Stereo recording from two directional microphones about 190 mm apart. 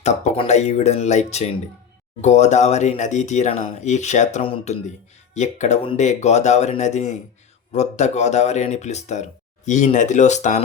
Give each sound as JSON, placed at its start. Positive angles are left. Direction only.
{"t": 0.0, "sound": "speech", "side_deg": 35}